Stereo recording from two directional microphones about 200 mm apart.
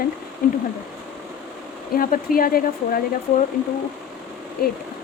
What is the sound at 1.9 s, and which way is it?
A woman's voice, 45° left (ahead or behind).